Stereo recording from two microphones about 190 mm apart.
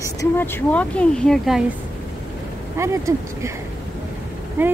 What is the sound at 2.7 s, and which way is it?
Speech, 15° right (ahead or behind).